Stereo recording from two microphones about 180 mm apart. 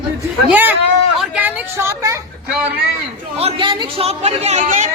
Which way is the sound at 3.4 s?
30° right (ahead or behind).